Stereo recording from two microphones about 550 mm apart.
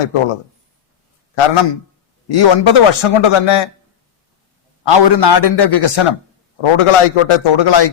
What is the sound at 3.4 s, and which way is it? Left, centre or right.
Speech, left.